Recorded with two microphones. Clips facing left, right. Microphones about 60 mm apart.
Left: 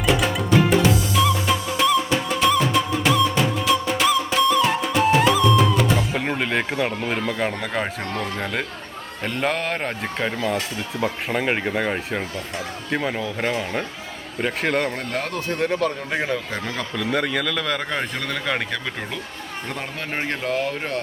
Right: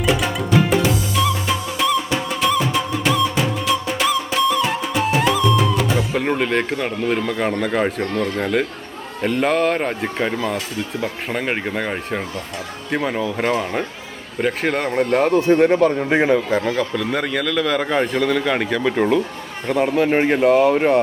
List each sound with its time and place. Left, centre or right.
0.0 s music: centre
9.2 s a man's voice: centre
14.8 s speech: centre
15.5 s speech: right
16.5 s a man's voice: centre
20.7 s speech: right